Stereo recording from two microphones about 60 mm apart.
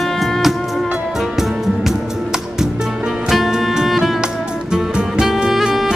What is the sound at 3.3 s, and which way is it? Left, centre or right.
Music, centre.